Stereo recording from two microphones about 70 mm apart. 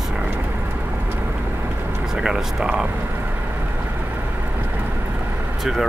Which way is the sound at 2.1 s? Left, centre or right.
Centre.